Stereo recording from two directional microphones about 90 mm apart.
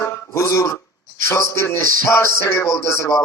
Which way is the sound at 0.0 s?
30° left (ahead or behind).